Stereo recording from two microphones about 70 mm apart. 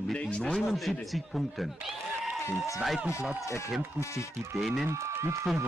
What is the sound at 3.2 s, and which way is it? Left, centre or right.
Speech, centre.